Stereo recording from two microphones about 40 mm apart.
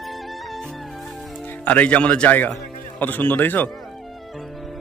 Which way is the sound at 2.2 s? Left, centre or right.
Left.